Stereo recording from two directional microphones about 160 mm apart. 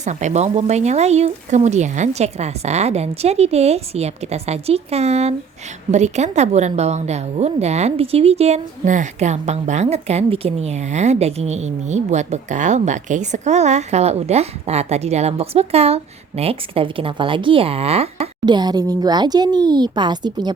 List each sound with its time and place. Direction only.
0.0 s a woman's voice: 50° right (ahead or behind)
18.4 s speech: 25° right (ahead or behind)